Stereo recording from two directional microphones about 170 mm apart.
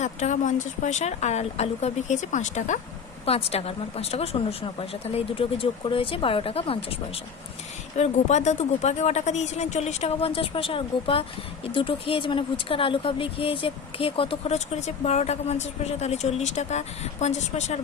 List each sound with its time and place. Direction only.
0.0 s speech: 45° left (ahead or behind)